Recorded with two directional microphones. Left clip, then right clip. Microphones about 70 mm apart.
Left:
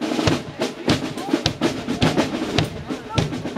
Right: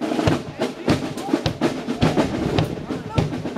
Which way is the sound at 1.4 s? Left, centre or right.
Left.